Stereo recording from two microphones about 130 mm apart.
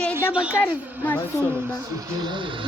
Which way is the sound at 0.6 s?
15° left (ahead or behind).